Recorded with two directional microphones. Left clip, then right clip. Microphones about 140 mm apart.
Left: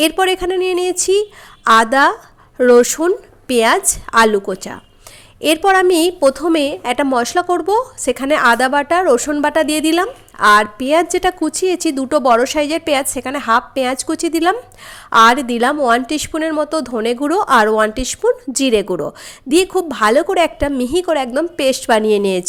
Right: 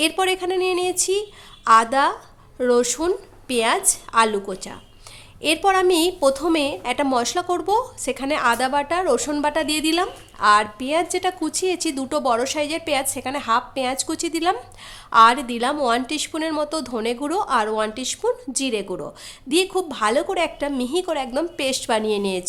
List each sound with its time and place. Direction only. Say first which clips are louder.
0.0 s speech: left 6 dB; 35° left (ahead or behind)